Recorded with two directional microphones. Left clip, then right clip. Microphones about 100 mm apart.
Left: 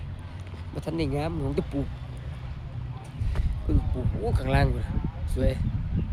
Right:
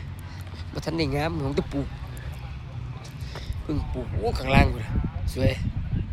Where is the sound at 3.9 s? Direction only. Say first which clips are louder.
Right 3 dB; 5° right (ahead or behind).